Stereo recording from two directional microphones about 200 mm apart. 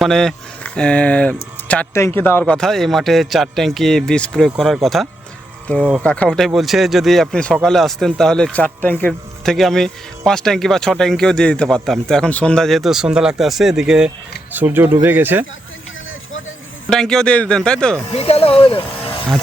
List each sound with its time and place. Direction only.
0.0 s speech: centre (ahead or behind)
16.9 s speech: 5° left (ahead or behind)
18.1 s speech: 30° left (ahead or behind)